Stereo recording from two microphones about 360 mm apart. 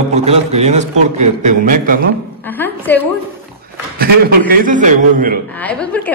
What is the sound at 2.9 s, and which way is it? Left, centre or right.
Speech, centre.